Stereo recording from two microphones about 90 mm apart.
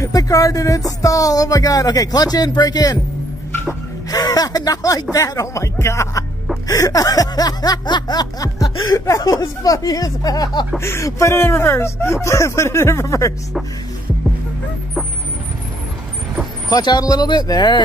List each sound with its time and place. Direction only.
0.0 s speech: 40° left (ahead or behind)
4.1 s snicker: 45° left (ahead or behind)
5.1 s speech: 35° left (ahead or behind)
6.7 s snicker: 40° left (ahead or behind)
10.8 s speech: 30° left (ahead or behind)
16.6 s snicker: 50° left (ahead or behind)